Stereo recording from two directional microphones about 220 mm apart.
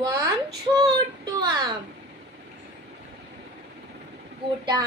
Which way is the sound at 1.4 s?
15° right (ahead or behind).